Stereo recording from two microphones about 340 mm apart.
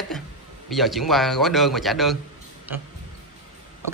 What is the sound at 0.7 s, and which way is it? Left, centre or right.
Speech, centre.